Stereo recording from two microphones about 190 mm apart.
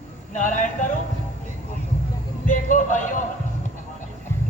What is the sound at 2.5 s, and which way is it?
Speech, 40° left (ahead or behind).